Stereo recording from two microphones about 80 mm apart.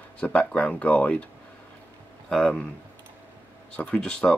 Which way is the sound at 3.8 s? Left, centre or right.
Centre.